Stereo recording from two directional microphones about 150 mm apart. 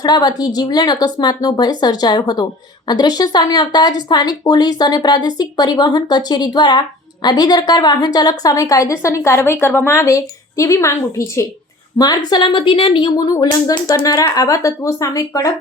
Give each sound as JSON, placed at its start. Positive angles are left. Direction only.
{"t": 0.0, "sound": "a woman's voice", "side_deg": 25}
{"t": 11.9, "sound": "a woman's voice", "side_deg": 25}